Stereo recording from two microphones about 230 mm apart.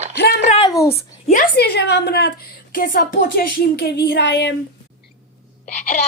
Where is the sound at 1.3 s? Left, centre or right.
Left.